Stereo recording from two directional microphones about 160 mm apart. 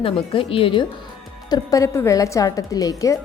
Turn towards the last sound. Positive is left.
turn(degrees=20)  # may be behind; listen again after turning